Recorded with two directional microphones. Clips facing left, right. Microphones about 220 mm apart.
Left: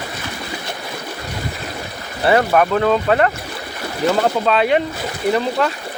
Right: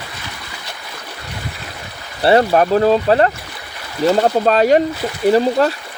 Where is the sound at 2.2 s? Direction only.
30° right (ahead or behind).